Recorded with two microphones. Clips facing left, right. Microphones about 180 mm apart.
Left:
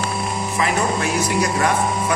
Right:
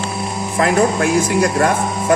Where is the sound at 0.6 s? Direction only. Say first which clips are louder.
Right 7 dB; 50° right (ahead or behind).